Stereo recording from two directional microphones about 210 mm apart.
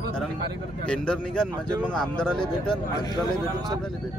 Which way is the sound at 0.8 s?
5° left (ahead or behind).